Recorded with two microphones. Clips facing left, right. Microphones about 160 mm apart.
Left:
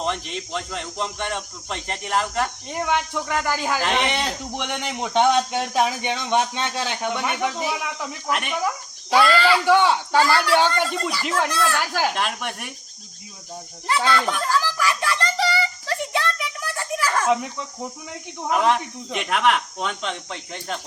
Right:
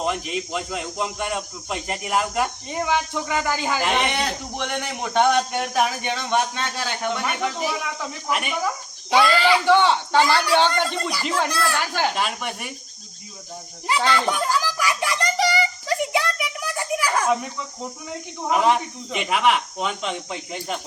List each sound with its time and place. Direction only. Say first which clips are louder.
0.0 s speech: right 2 dB; 5° right (ahead or behind)
4.1 s a man's voice: even; 20° left (ahead or behind)
8.3 s speech: even; 5° right (ahead or behind)
9.1 s speech: even; 15° right (ahead or behind)
9.6 s a man's voice: even; 10° left (ahead or behind)
10.2 s speech: even; 15° right (ahead or behind)
10.5 s a man's voice: even; 10° left (ahead or behind)
11.5 s speech: left 1 dB; 10° right (ahead or behind)
11.9 s speech: even; centre (ahead or behind)
14.1 s a sound: even; 15° right (ahead or behind)
18.4 s speech: right 1 dB; centre (ahead or behind)